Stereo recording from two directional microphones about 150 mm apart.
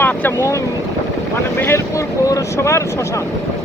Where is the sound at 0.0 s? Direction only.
10° left (ahead or behind).